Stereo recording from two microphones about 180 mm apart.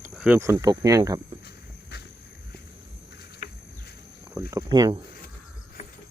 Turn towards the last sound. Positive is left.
turn(degrees=-25)  # may be behind; listen again after turning